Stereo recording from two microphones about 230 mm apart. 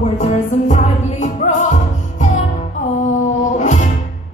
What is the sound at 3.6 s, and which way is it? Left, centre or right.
Music, left.